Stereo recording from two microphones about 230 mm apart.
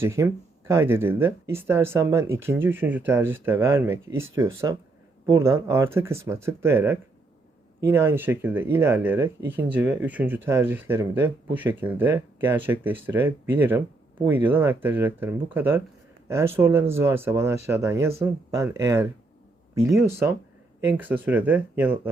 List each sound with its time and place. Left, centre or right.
0.0 s speech: centre